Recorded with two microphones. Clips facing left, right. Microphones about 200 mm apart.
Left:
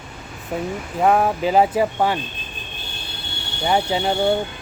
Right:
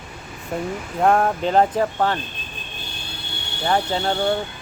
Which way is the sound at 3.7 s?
10° left (ahead or behind).